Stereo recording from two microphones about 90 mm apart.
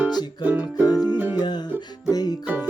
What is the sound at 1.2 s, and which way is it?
Music, 20° right (ahead or behind).